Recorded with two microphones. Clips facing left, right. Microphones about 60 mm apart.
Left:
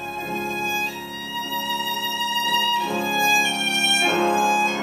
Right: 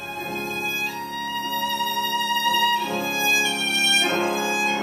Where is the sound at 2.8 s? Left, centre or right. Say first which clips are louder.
Left 3 dB; centre.